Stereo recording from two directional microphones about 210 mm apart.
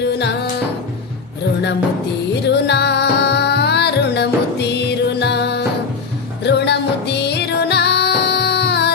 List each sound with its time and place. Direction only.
0.0 s music: 55° left (ahead or behind)
2.3 s music: 55° left (ahead or behind)